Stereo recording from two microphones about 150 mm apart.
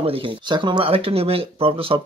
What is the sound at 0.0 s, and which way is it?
Speech, 35° right (ahead or behind).